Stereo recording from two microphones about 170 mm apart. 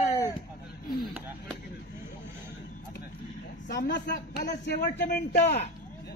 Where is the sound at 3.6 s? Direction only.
85° left.